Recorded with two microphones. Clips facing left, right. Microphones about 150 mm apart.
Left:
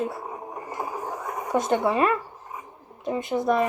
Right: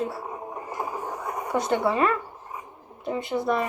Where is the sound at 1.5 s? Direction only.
20° left (ahead or behind).